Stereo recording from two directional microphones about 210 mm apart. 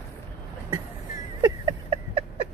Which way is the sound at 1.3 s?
20° right (ahead or behind).